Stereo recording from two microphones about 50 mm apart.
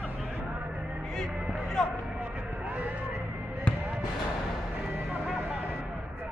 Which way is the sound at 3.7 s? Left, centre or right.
Left.